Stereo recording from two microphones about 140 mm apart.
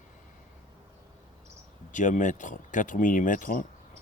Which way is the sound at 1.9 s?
60° left (ahead or behind).